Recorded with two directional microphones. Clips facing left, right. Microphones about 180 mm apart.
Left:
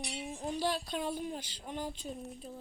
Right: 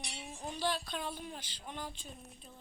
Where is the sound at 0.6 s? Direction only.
40° left (ahead or behind).